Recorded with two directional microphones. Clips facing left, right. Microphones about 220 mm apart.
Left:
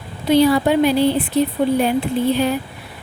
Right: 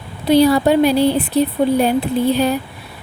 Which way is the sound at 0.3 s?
35° right (ahead or behind).